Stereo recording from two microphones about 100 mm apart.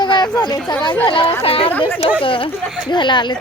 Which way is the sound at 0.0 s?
50° left (ahead or behind).